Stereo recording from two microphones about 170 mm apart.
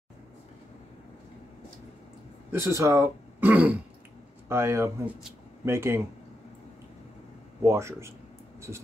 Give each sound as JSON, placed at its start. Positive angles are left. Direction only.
{"t": 2.5, "sound": "speech", "side_deg": -15}
{"t": 7.6, "sound": "speech", "side_deg": -15}